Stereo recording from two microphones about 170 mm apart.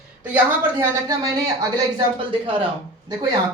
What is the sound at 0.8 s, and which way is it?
Speech, 20° right (ahead or behind).